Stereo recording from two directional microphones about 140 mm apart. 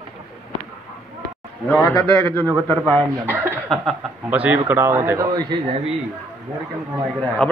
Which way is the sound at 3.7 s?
5° left (ahead or behind).